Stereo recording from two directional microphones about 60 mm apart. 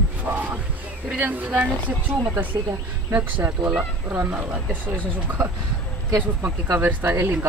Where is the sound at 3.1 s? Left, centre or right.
Right.